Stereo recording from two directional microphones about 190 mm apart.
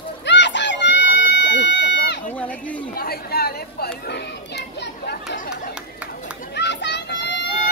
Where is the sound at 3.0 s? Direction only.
55° left (ahead or behind).